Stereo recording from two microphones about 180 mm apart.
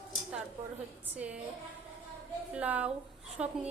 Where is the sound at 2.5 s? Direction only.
10° right (ahead or behind).